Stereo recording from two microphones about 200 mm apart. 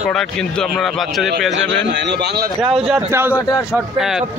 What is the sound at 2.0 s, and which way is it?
Speech, 55° right (ahead or behind).